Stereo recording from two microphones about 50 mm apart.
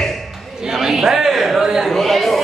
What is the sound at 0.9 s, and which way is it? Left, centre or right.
Speech, centre.